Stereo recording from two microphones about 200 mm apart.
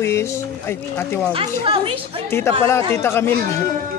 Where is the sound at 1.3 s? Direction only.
25° right (ahead or behind).